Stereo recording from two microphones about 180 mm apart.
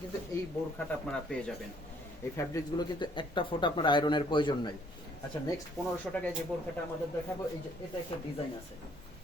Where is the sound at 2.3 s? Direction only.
15° left (ahead or behind).